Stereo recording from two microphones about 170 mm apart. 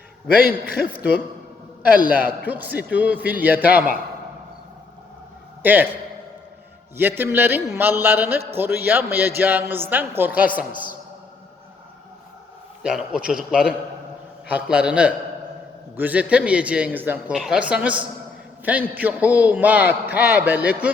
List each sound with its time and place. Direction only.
0.4 s a man's voice: 65° left (ahead or behind)
2.0 s a man's voice: 10° right (ahead or behind)
5.6 s a man's voice: 10° right (ahead or behind)
12.8 s a man's voice: 5° right (ahead or behind)